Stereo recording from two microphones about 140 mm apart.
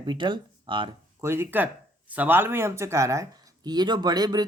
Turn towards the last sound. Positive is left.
turn(degrees=-30)  # may be behind; listen again after turning